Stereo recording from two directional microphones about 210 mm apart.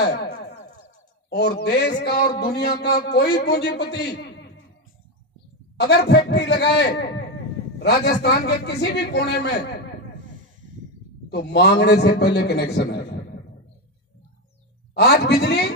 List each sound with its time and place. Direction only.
0.0 s a man's voice: 50° left (ahead or behind)
1.3 s a man's voice: 50° left (ahead or behind)
5.8 s a man's voice: 50° left (ahead or behind)
11.2 s a man's voice: 55° left (ahead or behind)
15.0 s a man's voice: 50° left (ahead or behind)